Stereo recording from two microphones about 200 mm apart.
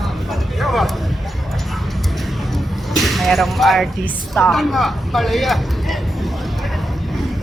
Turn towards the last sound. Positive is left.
turn(degrees=0)  # may be behind; listen again after turning